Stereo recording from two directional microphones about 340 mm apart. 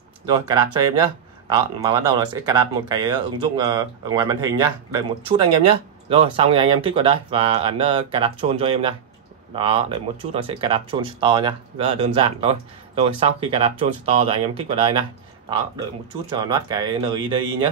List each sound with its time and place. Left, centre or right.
0.5 s speech: centre
16.3 s speech: centre